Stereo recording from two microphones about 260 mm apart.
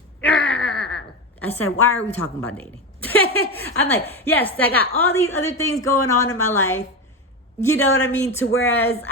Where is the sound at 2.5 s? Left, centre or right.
Centre.